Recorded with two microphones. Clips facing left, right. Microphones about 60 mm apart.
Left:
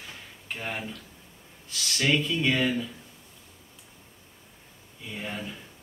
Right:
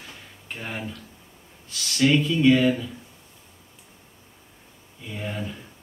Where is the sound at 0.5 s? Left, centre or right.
Centre.